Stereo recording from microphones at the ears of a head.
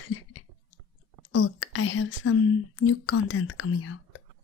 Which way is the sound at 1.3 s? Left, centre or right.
Left.